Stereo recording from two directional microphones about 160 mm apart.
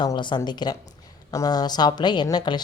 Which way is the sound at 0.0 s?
30° left (ahead or behind).